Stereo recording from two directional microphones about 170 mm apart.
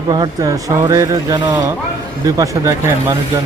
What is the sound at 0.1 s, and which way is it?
Speech, 25° right (ahead or behind).